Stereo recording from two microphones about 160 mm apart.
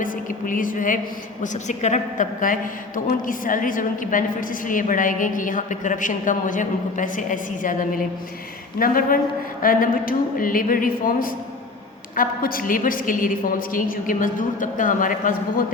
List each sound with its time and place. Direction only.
0.0 s a man's voice: 55° left (ahead or behind)